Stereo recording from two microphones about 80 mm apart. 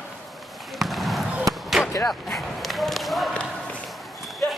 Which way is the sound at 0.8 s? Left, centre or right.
Centre.